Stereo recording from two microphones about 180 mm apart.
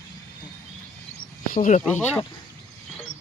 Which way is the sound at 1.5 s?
45° left (ahead or behind).